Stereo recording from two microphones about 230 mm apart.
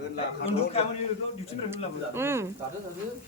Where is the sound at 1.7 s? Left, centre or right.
Centre.